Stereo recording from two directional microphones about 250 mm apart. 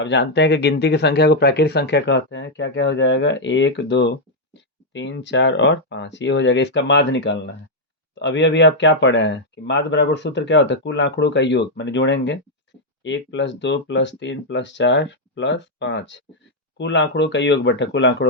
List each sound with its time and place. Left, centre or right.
0.0 s speech: left